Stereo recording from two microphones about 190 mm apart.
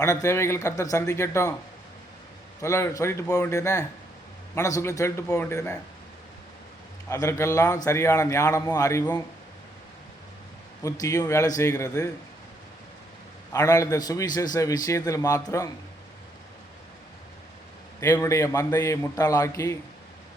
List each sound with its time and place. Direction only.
0.0 s a man's voice: 15° left (ahead or behind)
2.6 s a man's voice: 15° left (ahead or behind)
7.1 s a man's voice: 15° left (ahead or behind)
10.8 s a man's voice: 15° left (ahead or behind)
13.5 s a man's voice: 15° left (ahead or behind)
18.0 s a man's voice: 15° left (ahead or behind)